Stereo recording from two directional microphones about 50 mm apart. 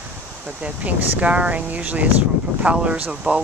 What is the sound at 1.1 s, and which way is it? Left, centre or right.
Speech, right.